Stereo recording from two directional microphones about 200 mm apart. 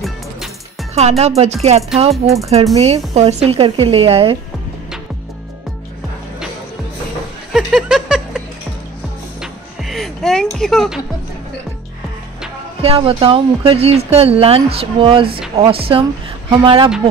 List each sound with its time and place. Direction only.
0.9 s speech: 35° right (ahead or behind)
7.5 s a sound: 5° right (ahead or behind)
9.4 s music: centre (ahead or behind)
12.8 s speech: 30° right (ahead or behind)